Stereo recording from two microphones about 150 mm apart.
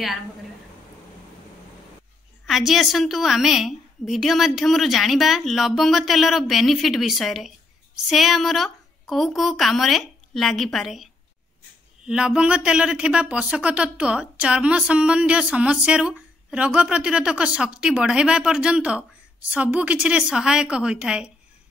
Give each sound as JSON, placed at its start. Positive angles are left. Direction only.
{"t": 2.4, "sound": "a woman's voice", "side_deg": 0}